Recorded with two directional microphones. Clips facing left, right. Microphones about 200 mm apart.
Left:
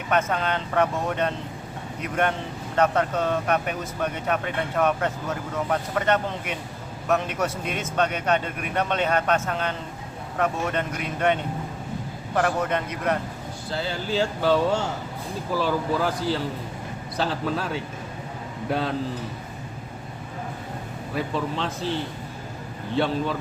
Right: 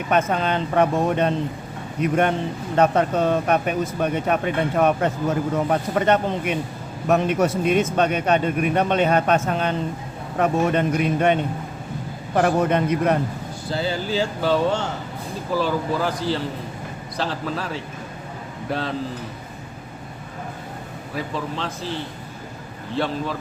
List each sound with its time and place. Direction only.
0.1 s a man's voice: 15° right (ahead or behind)
13.7 s speech: 5° right (ahead or behind)
21.2 s speech: centre (ahead or behind)
23.0 s speech: centre (ahead or behind)